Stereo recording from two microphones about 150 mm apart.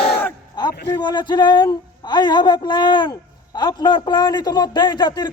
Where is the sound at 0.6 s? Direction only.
30° left (ahead or behind).